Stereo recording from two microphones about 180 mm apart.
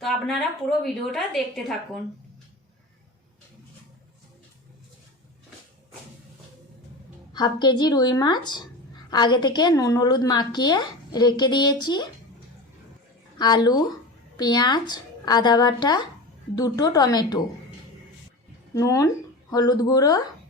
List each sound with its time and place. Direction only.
0.0 s a woman's voice: centre (ahead or behind)
7.3 s a woman's voice: 25° left (ahead or behind)
13.4 s a woman's voice: 25° left (ahead or behind)
18.7 s speech: 20° left (ahead or behind)